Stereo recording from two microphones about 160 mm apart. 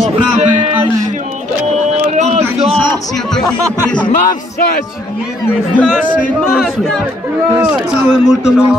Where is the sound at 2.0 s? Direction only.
50° right (ahead or behind).